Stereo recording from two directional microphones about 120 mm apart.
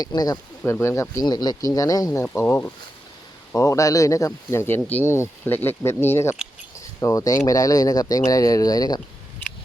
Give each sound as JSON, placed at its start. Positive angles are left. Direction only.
{"t": 0.0, "sound": "speech", "side_deg": 35}
{"t": 0.6, "sound": "speech", "side_deg": 20}
{"t": 2.3, "sound": "speech", "side_deg": 20}